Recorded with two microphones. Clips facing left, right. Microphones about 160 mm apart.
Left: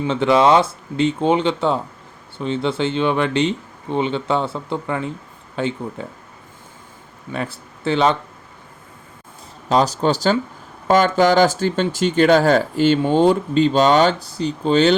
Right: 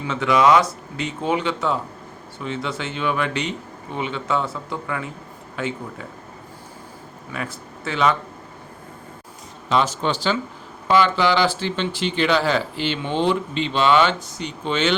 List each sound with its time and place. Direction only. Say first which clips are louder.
0.1 s speech: left 2 dB; 30° left (ahead or behind)
7.3 s speech: left 4 dB; 30° left (ahead or behind)
9.6 s speech: left 4 dB; 40° left (ahead or behind)